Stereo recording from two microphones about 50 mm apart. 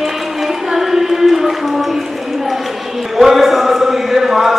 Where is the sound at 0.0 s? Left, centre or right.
Centre.